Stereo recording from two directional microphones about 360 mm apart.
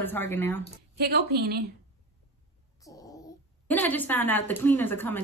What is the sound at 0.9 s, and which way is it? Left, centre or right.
Speech, right.